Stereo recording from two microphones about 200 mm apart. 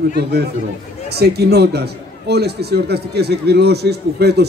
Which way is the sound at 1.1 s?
55° right (ahead or behind).